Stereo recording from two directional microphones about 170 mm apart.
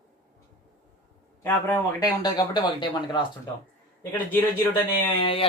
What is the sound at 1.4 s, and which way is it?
Speech, 15° left (ahead or behind).